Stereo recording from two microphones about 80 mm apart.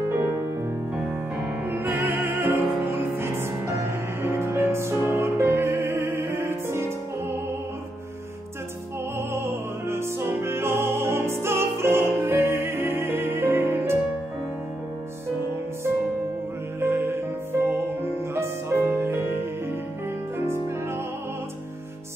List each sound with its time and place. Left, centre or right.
1.7 s music: right
9.3 s music: right
16.8 s music: right